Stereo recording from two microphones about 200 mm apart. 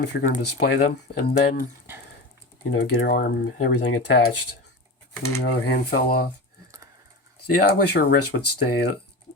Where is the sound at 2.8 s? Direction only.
50° left (ahead or behind).